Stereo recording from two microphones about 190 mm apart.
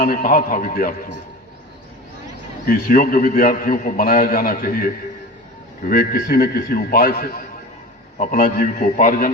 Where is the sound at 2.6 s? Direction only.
50° left (ahead or behind).